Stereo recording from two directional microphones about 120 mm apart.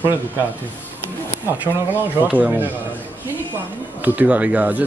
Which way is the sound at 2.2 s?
10° right (ahead or behind).